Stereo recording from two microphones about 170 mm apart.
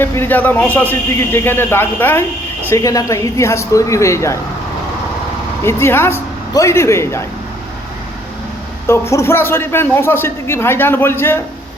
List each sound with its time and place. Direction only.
0.0 s a man's voice: 15° left (ahead or behind)
5.6 s a man's voice: 15° left (ahead or behind)
8.9 s a man's voice: 15° left (ahead or behind)